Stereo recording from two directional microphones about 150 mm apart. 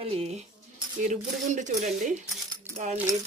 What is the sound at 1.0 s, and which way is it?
Speech, 55° right (ahead or behind).